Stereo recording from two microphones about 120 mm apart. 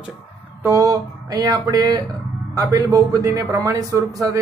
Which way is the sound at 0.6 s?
25° right (ahead or behind).